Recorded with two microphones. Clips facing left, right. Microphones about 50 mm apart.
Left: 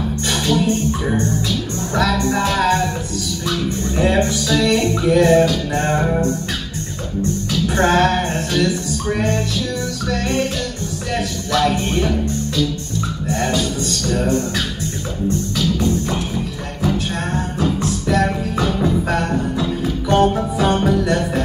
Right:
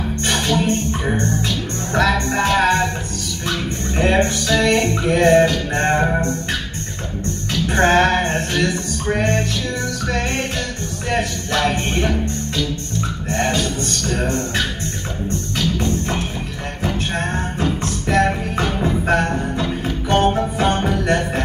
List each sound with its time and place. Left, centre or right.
0.3 s music: right
11.1 s music: right
13.3 s music: right